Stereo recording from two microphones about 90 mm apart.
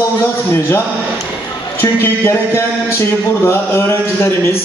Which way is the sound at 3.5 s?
30° left (ahead or behind).